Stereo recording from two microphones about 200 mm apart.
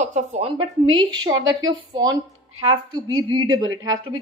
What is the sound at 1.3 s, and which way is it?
Speech, 75° right (ahead or behind).